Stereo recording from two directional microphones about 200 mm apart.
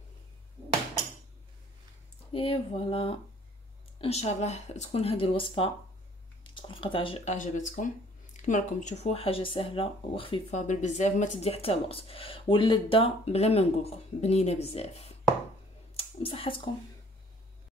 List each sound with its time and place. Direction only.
2.3 s speech: 25° left (ahead or behind)